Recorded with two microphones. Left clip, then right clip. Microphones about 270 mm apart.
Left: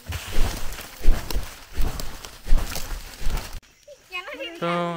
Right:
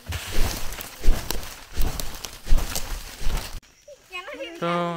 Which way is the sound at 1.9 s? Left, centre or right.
Centre.